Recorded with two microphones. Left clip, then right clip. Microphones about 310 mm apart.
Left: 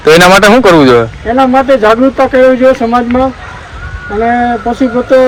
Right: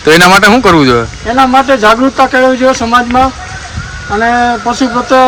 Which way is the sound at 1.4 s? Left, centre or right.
Centre.